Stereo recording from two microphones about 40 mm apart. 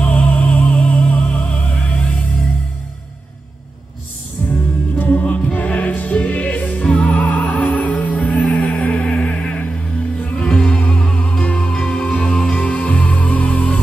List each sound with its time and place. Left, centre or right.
0.0 s music: left
4.5 s music: left
5.2 s music: left
12.6 s music: left